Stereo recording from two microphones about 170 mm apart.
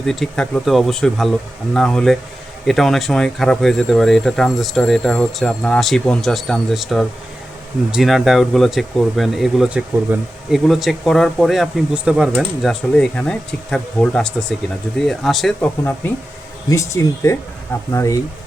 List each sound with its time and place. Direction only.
0.0 s speech: 5° left (ahead or behind)
15.8 s speech: 10° left (ahead or behind)